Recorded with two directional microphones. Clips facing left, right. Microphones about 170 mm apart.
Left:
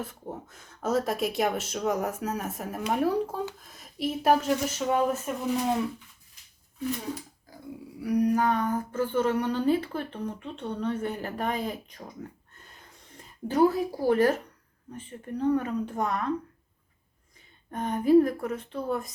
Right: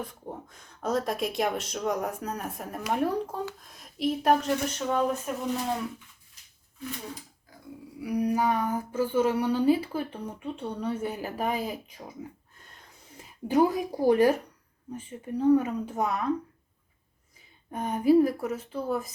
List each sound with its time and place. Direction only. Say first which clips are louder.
0.0 s speech: left 1 dB; 5° left (ahead or behind)
8.0 s speech: left 2 dB; 5° right (ahead or behind)
12.5 s a sound: left 1 dB; centre (ahead or behind)
13.5 s speech: left 1 dB; 15° right (ahead or behind)
17.7 s speech: even; 10° right (ahead or behind)